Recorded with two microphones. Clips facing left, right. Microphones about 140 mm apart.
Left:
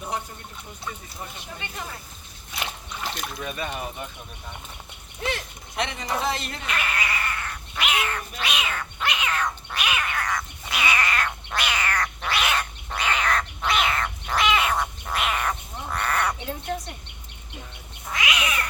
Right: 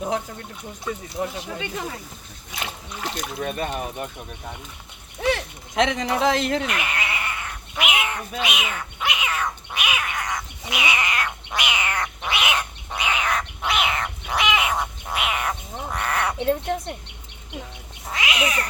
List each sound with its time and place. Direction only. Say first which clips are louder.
1.2 s speech: right 9 dB; 90° right
2.6 s speech: right 2 dB; 15° right (ahead or behind)
3.4 s speech: right 5 dB; 45° right (ahead or behind)
5.3 s speech: right 7 dB; 90° right
6.7 s cat: right 1 dB; 15° right (ahead or behind)
16.4 s a sound: right 8 dB; 55° right (ahead or behind)
18.1 s cat: right 2 dB; 30° right (ahead or behind)